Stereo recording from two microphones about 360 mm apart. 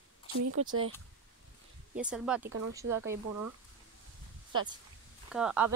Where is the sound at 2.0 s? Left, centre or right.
Centre.